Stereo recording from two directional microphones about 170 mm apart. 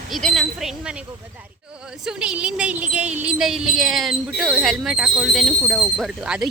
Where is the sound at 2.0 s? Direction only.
5° right (ahead or behind).